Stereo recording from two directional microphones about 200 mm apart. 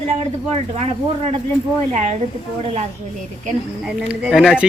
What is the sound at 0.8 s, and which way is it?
Speech, 30° right (ahead or behind).